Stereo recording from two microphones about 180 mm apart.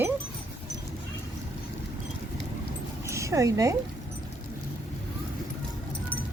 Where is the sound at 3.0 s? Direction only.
15° right (ahead or behind).